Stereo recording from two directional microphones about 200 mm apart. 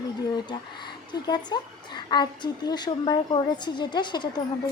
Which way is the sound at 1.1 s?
20° left (ahead or behind).